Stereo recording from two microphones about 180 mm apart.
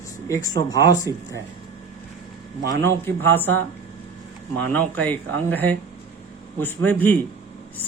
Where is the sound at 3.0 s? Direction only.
10° left (ahead or behind).